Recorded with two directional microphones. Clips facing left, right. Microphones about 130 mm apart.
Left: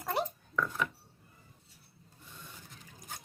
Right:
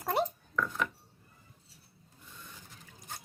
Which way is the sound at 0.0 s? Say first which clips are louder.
Right 3 dB; 25° right (ahead or behind).